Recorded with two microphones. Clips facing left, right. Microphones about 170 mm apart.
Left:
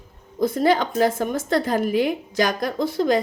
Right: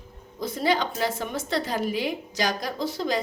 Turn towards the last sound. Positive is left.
turn(degrees=55)  # may be behind; listen again after turning